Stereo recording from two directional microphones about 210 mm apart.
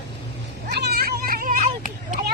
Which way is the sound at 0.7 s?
50° right (ahead or behind).